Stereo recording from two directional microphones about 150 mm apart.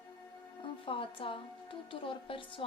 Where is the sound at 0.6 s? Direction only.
35° left (ahead or behind).